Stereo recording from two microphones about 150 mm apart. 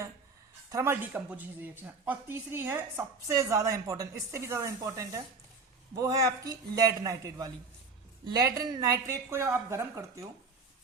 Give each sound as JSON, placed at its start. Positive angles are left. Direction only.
{"t": 0.7, "sound": "speech", "side_deg": -15}